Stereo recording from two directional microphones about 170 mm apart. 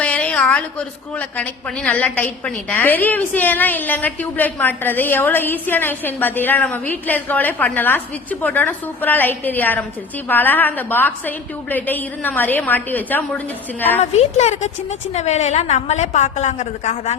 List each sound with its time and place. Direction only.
0.0 s a sound: 5° left (ahead or behind)
1.4 s a woman's voice: 10° left (ahead or behind)
14.0 s a woman's voice: 40° left (ahead or behind)